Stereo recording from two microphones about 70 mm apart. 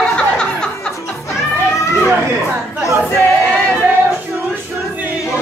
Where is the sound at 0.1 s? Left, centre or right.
Centre.